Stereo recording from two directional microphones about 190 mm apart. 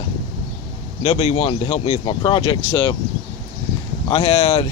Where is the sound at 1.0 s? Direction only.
35° left (ahead or behind).